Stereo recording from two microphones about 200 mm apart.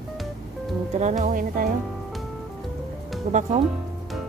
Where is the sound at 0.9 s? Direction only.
35° right (ahead or behind).